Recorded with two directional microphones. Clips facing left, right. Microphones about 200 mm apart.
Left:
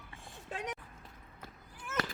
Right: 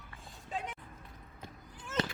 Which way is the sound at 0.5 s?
85° left.